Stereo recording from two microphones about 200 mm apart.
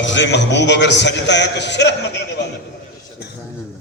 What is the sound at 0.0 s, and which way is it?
A man's voice, 65° left (ahead or behind).